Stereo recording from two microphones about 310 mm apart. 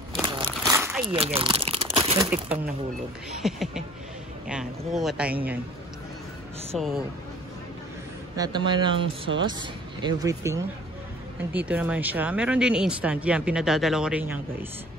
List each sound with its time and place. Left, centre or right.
0.1 s a sound: centre
1.3 s speech: centre
6.7 s speech: centre
8.4 s speech: centre